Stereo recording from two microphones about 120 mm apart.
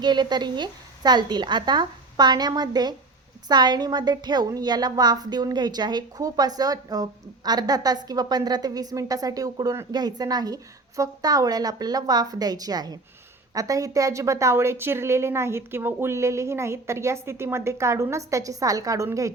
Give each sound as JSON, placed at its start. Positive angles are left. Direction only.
{"t": 0.0, "sound": "a woman's voice", "side_deg": -35}